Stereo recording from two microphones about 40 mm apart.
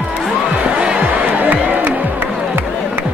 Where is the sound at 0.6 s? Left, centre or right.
Right.